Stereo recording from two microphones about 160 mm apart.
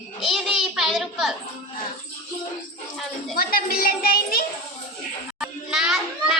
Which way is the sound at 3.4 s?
65° left (ahead or behind).